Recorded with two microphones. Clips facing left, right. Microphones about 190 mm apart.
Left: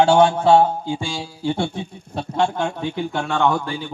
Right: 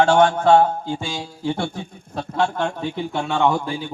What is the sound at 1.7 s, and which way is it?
Speech, 25° left (ahead or behind).